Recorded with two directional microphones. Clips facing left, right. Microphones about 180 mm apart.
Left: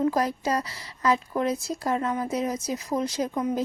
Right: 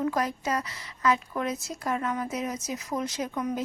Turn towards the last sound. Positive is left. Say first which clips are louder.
# left 4 dB
turn(degrees=30)  # may be behind; listen again after turning